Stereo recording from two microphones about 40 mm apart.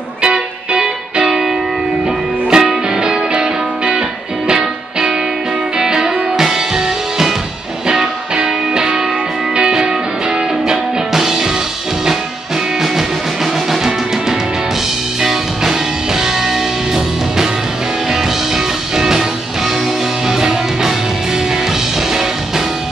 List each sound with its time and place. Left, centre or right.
0.2 s music: right
2.5 s music: centre
11.1 s music: centre
15.2 s music: centre
18.9 s music: centre
20.2 s music: centre